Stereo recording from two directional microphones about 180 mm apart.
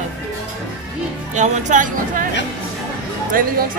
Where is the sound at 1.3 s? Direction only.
40° right (ahead or behind).